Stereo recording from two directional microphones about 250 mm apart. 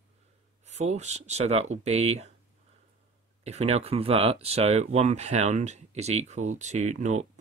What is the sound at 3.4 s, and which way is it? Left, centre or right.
Speech, right.